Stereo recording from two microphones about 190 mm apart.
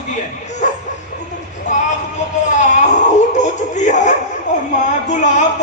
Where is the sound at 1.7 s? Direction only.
40° left (ahead or behind).